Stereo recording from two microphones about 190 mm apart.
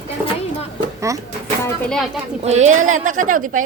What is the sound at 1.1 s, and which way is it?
Speech, 15° right (ahead or behind).